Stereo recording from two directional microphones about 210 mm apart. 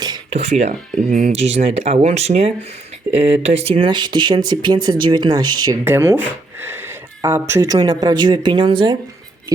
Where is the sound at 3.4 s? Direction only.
30° right (ahead or behind).